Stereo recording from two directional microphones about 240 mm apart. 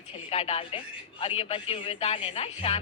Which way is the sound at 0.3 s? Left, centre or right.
Left.